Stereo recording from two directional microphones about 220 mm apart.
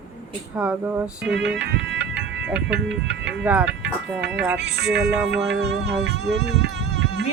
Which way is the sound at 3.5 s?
5° right (ahead or behind).